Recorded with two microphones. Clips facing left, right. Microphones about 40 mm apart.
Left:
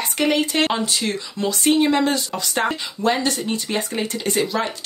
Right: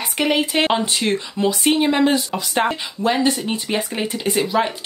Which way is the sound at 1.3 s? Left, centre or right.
Centre.